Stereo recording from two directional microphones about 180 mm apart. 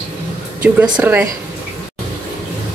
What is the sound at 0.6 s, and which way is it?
Speech, 5° right (ahead or behind).